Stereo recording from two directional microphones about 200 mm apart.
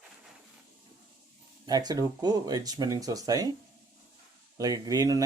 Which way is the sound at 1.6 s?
20° right (ahead or behind).